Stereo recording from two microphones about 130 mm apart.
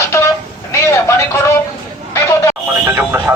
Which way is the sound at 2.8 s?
15° right (ahead or behind).